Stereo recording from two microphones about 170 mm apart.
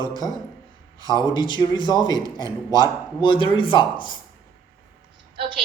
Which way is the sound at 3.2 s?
30° left (ahead or behind).